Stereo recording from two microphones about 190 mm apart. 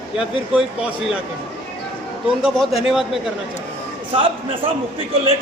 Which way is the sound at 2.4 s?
Centre (ahead or behind).